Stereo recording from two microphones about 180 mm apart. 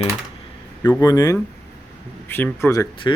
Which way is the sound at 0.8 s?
15° left (ahead or behind).